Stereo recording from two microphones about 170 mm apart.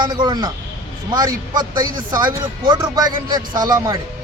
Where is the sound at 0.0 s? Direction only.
25° right (ahead or behind).